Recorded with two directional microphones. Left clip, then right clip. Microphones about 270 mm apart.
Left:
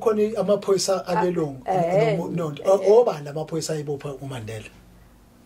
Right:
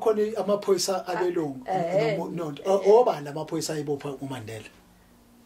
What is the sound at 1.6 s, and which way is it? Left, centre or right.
Speech, left.